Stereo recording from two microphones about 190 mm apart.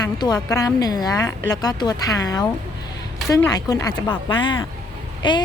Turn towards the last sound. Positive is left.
turn(degrees=25)  # may be behind; listen again after turning